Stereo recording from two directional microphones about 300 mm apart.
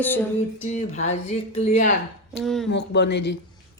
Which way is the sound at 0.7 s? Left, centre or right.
Left.